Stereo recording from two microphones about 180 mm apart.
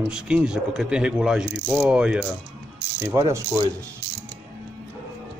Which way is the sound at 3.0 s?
15° right (ahead or behind).